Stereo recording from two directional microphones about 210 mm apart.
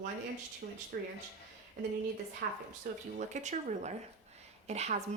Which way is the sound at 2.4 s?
45° right (ahead or behind).